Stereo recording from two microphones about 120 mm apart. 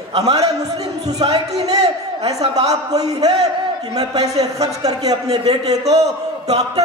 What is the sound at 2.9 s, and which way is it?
Speech, 30° right (ahead or behind).